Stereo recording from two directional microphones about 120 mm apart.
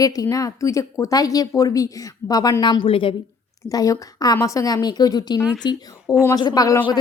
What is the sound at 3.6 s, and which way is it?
A woman's voice, 30° left (ahead or behind).